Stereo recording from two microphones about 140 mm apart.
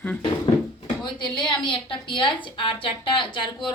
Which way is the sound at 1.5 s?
35° left (ahead or behind).